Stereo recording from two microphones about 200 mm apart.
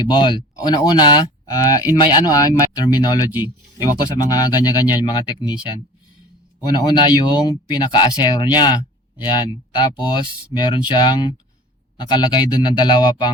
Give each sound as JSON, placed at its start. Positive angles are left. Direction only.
{"t": 0.1, "sound": "speech", "side_deg": 25}
{"t": 6.7, "sound": "speech", "side_deg": 20}